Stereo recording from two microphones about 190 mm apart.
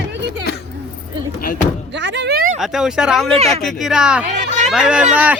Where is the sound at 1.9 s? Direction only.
70° right (ahead or behind).